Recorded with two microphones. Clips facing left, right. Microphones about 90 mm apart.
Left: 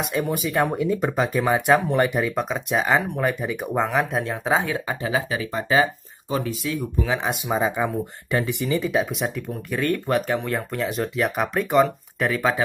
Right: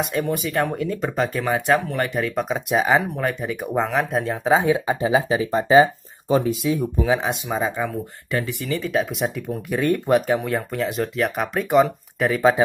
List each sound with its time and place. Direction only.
0.0 s speech: 5° left (ahead or behind)
1.9 s speech: 20° left (ahead or behind)
2.3 s speech: centre (ahead or behind)
4.6 s speech: 15° right (ahead or behind)
7.4 s speech: 10° left (ahead or behind)
8.3 s speech: 20° left (ahead or behind)
8.9 s speech: centre (ahead or behind)
9.7 s speech: 15° right (ahead or behind)
10.2 s speech: 5° right (ahead or behind)